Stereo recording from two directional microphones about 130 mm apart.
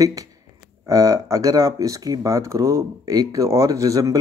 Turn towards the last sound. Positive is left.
turn(degrees=-25)  # may be behind; listen again after turning